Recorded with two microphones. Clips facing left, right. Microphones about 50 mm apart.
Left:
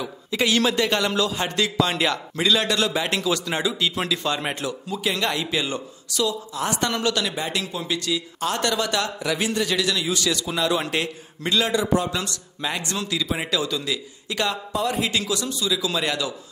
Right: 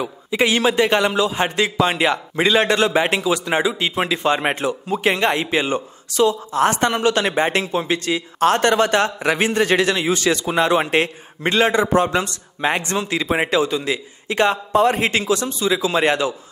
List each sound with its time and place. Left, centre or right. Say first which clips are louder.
0.0 s a man's voice: right 5 dB; right
7.2 s a man's voice: right 8 dB; right